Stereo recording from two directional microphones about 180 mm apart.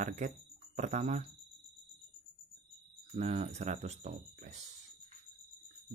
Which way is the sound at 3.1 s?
35° right (ahead or behind).